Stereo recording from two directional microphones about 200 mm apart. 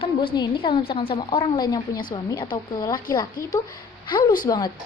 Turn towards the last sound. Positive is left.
turn(degrees=20)  # may be behind; listen again after turning